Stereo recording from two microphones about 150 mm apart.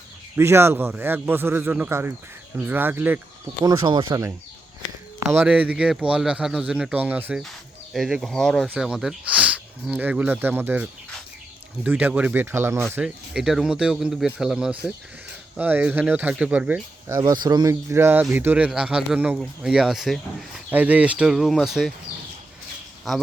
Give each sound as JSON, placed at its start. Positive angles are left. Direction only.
{"t": 0.3, "sound": "speech", "side_deg": -15}
{"t": 3.6, "sound": "speech", "side_deg": -25}
{"t": 5.3, "sound": "speech", "side_deg": -10}
{"t": 17.2, "sound": "speech", "side_deg": -25}
{"t": 23.1, "sound": "speech", "side_deg": 0}